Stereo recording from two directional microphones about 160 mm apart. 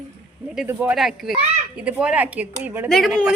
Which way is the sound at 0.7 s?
10° right (ahead or behind).